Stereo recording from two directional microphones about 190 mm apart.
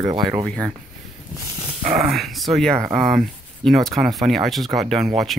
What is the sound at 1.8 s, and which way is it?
Speech, 45° right (ahead or behind).